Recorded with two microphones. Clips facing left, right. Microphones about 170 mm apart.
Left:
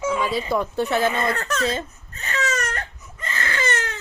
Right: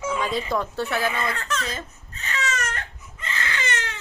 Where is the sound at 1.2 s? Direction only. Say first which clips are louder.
Left 4 dB; 45° left (ahead or behind).